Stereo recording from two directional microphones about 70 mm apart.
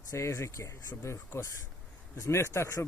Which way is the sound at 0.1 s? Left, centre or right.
Left.